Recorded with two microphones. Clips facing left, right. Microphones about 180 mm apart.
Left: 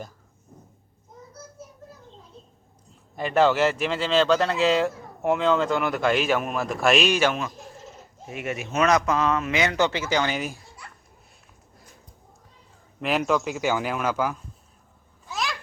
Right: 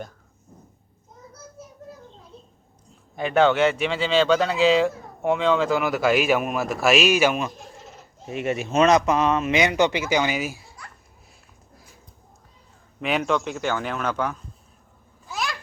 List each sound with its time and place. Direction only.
3.2 s speech: centre (ahead or behind)
8.3 s speech: 30° right (ahead or behind); by 10.6 s 5° right (ahead or behind)
13.0 s speech: centre (ahead or behind)
15.3 s babbling: centre (ahead or behind)